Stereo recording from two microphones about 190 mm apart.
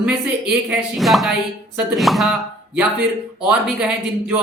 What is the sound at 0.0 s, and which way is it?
Speech, 5° right (ahead or behind).